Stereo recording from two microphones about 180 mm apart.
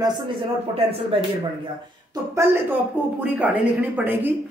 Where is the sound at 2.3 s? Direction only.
15° right (ahead or behind).